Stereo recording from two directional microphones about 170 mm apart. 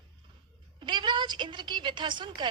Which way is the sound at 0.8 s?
25° right (ahead or behind).